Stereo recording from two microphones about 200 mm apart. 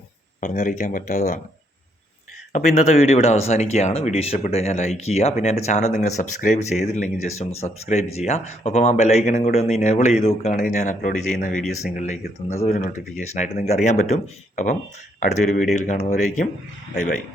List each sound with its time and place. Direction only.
0.3 s speech: 40° left (ahead or behind)
2.5 s a man's voice: 35° left (ahead or behind)